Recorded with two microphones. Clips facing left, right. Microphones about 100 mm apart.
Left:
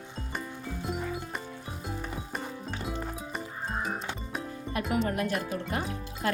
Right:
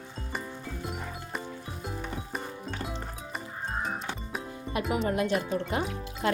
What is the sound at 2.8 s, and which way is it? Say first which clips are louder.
Music: left 2 dB; centre (ahead or behind).